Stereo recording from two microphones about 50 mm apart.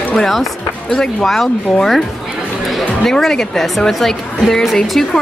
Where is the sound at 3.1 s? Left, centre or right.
Centre.